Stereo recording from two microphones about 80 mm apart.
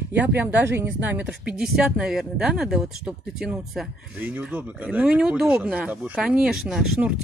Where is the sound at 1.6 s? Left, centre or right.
Centre.